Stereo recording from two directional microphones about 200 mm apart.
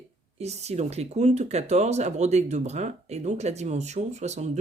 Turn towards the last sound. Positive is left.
turn(degrees=-35)  # may be behind; listen again after turning